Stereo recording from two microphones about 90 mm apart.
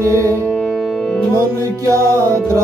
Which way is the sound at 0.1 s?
35° right (ahead or behind).